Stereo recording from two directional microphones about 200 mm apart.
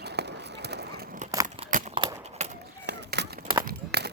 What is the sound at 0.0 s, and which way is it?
Run, 55° right (ahead or behind).